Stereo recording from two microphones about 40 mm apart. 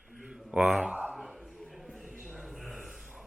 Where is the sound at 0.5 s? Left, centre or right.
Right.